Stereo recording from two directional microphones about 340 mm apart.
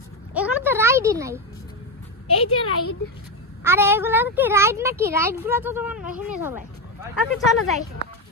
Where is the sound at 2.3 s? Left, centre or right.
Left.